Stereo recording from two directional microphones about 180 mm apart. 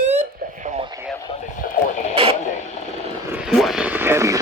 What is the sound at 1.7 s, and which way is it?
Radio, 40° left (ahead or behind).